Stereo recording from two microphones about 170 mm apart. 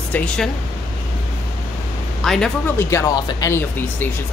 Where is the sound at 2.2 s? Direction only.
Centre (ahead or behind).